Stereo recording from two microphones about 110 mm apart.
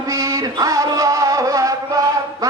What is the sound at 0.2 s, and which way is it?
Music, 30° right (ahead or behind).